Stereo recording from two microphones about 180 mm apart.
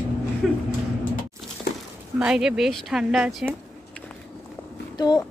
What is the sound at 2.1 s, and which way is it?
Speech, 5° right (ahead or behind).